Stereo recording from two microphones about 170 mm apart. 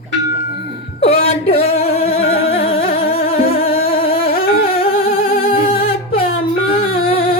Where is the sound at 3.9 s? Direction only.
35° left (ahead or behind).